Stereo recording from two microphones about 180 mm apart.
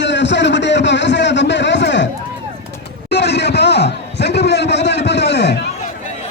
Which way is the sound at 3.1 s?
70° left (ahead or behind).